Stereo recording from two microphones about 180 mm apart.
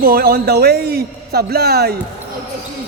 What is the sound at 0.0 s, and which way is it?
A man's voice, 55° right (ahead or behind).